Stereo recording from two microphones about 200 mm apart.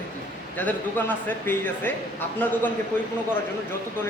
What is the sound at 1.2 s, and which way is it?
Speech, 10° left (ahead or behind).